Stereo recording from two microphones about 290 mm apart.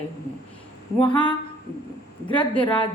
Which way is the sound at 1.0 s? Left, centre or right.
Centre.